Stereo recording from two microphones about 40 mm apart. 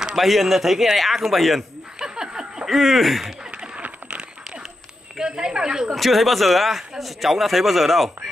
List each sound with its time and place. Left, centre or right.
0.0 s speech: centre
2.0 s a sound: centre
2.6 s speech: centre
3.5 s a sound: right
5.1 s speech: centre
5.9 s speech: centre